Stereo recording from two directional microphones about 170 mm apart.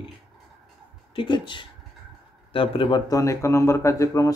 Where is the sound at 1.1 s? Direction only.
30° left (ahead or behind).